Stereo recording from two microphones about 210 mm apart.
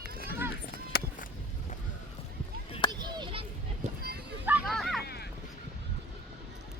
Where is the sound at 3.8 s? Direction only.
30° right (ahead or behind).